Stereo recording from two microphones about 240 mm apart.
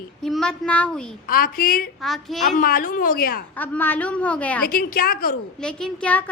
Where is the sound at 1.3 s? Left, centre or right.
Left.